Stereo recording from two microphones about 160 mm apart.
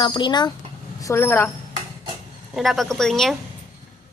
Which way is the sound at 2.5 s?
Centre (ahead or behind).